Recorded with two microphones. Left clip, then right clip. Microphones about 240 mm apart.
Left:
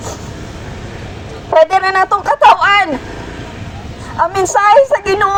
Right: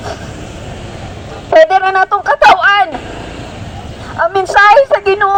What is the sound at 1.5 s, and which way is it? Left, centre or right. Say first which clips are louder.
A man's voice: right 2 dB; right.